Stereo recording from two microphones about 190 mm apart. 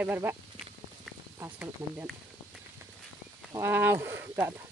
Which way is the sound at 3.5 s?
15° right (ahead or behind).